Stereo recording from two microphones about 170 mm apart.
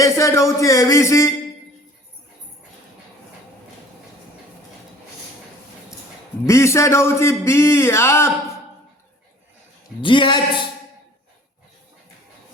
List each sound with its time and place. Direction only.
0.0 s music: 15° left (ahead or behind)
6.4 s a man's voice: 15° left (ahead or behind)
10.0 s speech: 30° left (ahead or behind)